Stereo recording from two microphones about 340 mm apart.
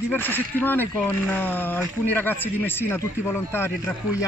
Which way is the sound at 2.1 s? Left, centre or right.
Centre.